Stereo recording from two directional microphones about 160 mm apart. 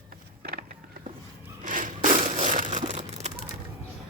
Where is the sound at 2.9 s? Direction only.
45° right (ahead or behind).